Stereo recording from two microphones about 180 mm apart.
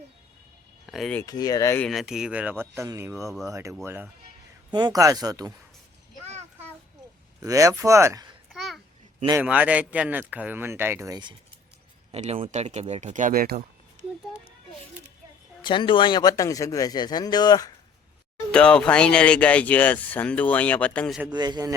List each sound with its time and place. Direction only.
0.9 s speech: centre (ahead or behind)
1.2 s speech: 20° left (ahead or behind)
1.8 s speech: centre (ahead or behind)
4.7 s speech: 20° right (ahead or behind)
7.4 s speech: 20° right (ahead or behind)
8.5 s babbling: centre (ahead or behind)
9.4 s speech: 10° right (ahead or behind)
12.1 s speech: 35° right (ahead or behind); by 13.7 s 55° right (ahead or behind)
15.6 s speech: 25° left (ahead or behind)
18.5 s speech: 5° left (ahead or behind)
21.3 s speech: 20° right (ahead or behind)